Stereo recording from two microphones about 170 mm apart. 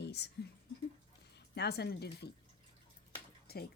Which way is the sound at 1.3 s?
75° left (ahead or behind).